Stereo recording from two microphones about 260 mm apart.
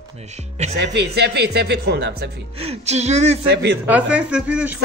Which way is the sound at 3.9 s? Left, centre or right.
Centre.